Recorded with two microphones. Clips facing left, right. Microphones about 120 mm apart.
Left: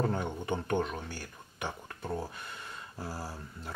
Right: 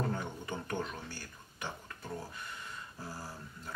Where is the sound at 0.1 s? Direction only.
25° left (ahead or behind).